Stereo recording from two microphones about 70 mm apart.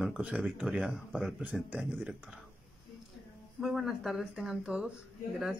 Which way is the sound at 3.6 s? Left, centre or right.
Centre.